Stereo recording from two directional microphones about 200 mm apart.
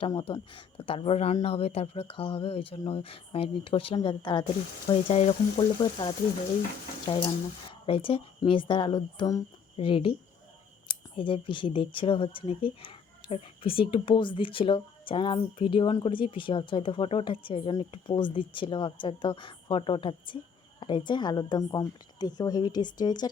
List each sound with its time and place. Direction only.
0.0 s speech: 25° left (ahead or behind)